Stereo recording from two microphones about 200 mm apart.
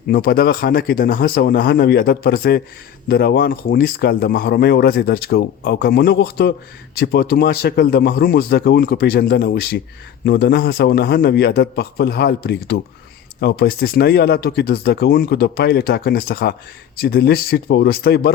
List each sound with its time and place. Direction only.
0.1 s speech: 50° left (ahead or behind)